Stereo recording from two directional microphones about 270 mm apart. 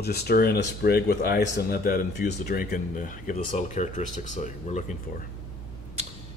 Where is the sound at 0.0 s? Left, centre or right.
Left.